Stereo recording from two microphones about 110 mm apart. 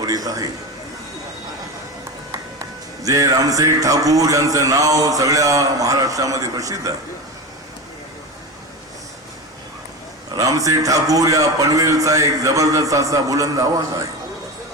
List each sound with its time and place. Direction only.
0.0 s a man's voice: 35° right (ahead or behind)
2.6 s music: 30° right (ahead or behind)
10.3 s music: 30° right (ahead or behind)